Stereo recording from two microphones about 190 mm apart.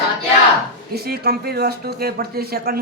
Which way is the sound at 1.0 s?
55° right (ahead or behind).